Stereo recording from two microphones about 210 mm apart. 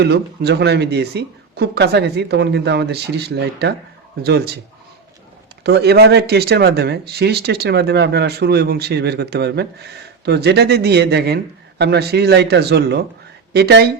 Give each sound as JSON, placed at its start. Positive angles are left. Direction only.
{"t": 0.0, "sound": "speech", "side_deg": -50}
{"t": 5.6, "sound": "speech", "side_deg": -50}